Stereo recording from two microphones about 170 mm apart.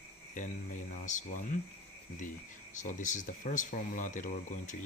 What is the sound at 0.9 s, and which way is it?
Speech, 50° left (ahead or behind).